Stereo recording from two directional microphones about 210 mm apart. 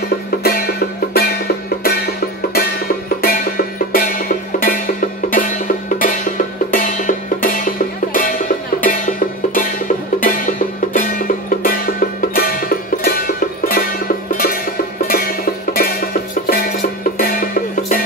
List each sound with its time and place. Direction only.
0.4 s music: 45° left (ahead or behind)
5.9 s music: 40° left (ahead or behind)